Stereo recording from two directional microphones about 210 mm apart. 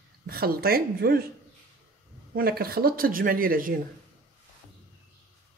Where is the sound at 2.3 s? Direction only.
45° right (ahead or behind).